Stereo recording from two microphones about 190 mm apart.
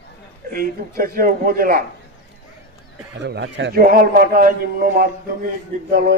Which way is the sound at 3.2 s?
65° right (ahead or behind).